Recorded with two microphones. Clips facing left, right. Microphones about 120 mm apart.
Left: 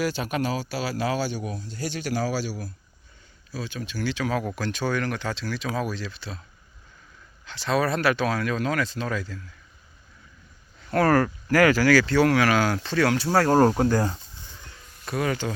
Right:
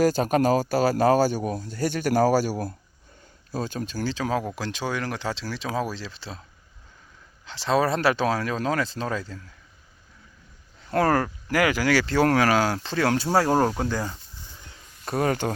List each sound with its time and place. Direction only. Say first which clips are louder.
0.0 s speech: right 6 dB; 40° right (ahead or behind)
7.4 s speech: right 2 dB; 30° right (ahead or behind)
10.9 s speech: left 1 dB; 20° right (ahead or behind)
13.7 s speech: left 5 dB; 5° left (ahead or behind)
15.0 s speech: right 2 dB; 40° right (ahead or behind)